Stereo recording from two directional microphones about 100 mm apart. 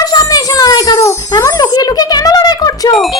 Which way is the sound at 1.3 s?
35° left (ahead or behind).